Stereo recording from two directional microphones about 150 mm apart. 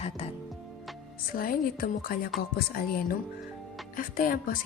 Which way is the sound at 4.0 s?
70° left (ahead or behind).